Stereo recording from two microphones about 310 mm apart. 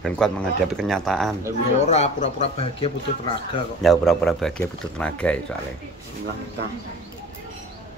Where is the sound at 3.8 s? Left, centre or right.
Centre.